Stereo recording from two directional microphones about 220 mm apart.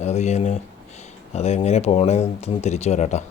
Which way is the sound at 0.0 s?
30° left (ahead or behind).